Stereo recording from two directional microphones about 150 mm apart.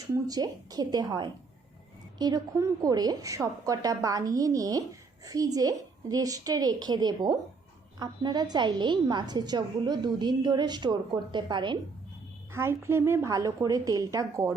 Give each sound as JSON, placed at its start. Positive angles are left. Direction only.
{"t": 0.1, "sound": "a woman's voice", "side_deg": -25}
{"t": 12.5, "sound": "a woman's voice", "side_deg": -15}